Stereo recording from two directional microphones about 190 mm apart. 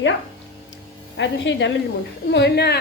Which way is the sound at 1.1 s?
70° left (ahead or behind).